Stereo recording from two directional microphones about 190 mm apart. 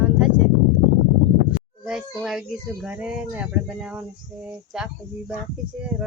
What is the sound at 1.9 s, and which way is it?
Speech, 5° right (ahead or behind).